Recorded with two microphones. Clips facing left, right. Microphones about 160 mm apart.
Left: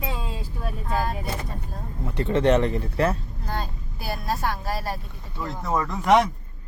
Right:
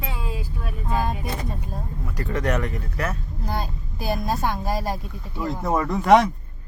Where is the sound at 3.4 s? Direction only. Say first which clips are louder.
Right 6 dB; 10° right (ahead or behind).